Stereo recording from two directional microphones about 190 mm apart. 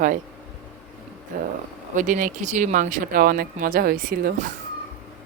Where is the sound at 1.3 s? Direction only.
50° right (ahead or behind).